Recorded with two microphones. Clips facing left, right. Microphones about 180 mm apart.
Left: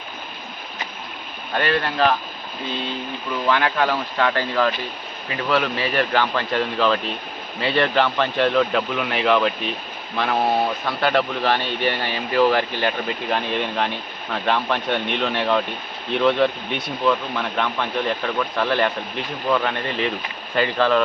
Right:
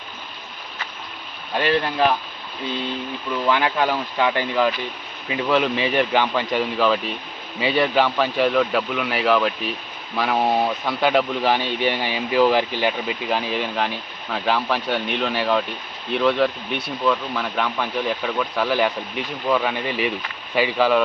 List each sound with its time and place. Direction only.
1.5 s speech: 10° right (ahead or behind)
3.5 s speech: 15° right (ahead or behind)